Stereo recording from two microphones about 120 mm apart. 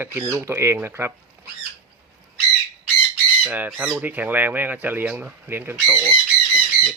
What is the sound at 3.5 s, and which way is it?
Speech, 15° right (ahead or behind).